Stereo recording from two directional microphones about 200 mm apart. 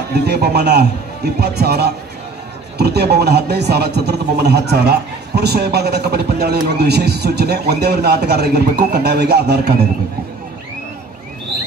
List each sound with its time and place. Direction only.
0.1 s a man's voice: 55° right (ahead or behind)